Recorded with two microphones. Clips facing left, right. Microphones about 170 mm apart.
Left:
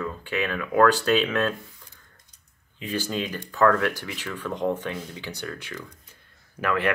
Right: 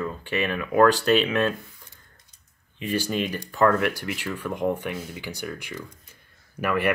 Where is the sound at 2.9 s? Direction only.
15° right (ahead or behind).